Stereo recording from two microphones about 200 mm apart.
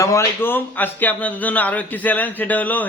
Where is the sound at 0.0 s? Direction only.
15° left (ahead or behind).